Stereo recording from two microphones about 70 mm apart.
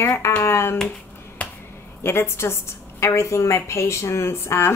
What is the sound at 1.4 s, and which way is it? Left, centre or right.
Finger snapping, left.